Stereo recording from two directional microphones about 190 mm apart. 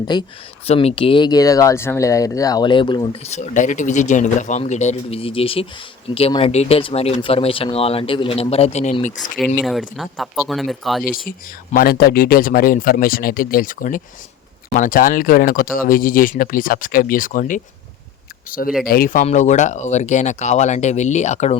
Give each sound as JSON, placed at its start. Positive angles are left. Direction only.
{"t": 0.1, "sound": "speech", "side_deg": 25}
{"t": 3.2, "sound": "speech", "side_deg": 35}
{"t": 9.6, "sound": "speech", "side_deg": 0}
{"t": 11.3, "sound": "speech", "side_deg": 50}